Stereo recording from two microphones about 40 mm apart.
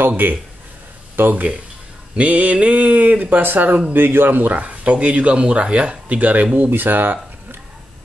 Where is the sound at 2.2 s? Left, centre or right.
Right.